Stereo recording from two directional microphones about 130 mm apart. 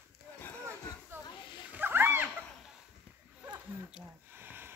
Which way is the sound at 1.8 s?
15° right (ahead or behind).